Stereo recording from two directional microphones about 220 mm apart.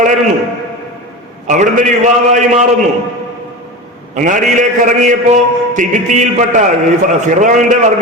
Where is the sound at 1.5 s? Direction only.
35° right (ahead or behind).